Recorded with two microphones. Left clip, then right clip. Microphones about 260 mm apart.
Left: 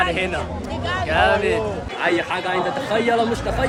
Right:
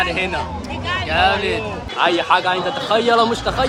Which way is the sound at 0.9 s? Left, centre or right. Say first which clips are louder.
Right 1 dB; centre.